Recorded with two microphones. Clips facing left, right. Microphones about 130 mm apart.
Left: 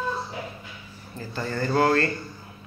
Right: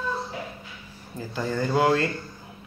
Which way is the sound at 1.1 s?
10° right (ahead or behind).